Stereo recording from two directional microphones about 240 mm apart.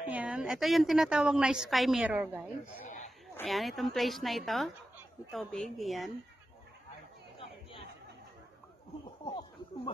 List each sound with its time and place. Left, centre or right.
0.1 s a woman's voice: centre
7.3 s chatter: left